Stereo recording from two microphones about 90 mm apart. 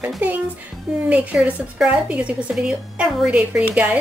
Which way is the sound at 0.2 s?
20° right (ahead or behind).